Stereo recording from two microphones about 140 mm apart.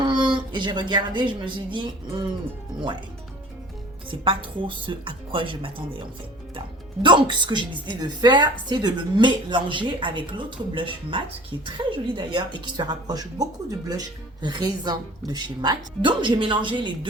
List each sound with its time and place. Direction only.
0.0 s a woman's voice: 35° right (ahead or behind)
4.1 s a woman's voice: 40° right (ahead or behind)
7.0 s a woman's voice: 35° right (ahead or behind)